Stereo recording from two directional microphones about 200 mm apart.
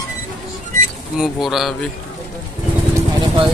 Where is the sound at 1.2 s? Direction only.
Centre (ahead or behind).